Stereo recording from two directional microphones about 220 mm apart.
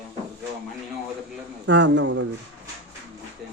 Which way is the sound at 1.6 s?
55° right (ahead or behind).